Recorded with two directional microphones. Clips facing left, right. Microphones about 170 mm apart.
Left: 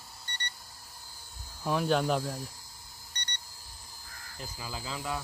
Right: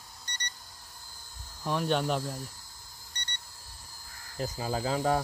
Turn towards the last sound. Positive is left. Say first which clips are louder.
# right 9 dB
turn(degrees=-45)  # may be behind; listen again after turning